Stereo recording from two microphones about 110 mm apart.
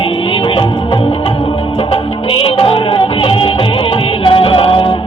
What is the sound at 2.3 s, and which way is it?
Music, 55° left (ahead or behind).